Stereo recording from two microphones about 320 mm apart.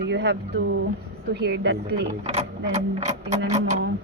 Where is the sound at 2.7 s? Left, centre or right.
Right.